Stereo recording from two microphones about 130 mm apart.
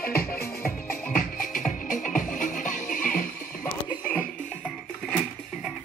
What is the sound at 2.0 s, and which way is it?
Music, 85° left.